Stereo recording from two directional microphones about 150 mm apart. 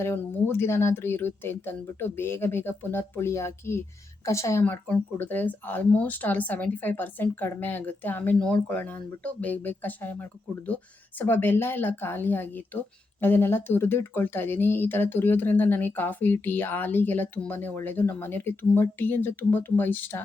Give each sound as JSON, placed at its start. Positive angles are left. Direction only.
{"t": 0.0, "sound": "speech", "side_deg": 15}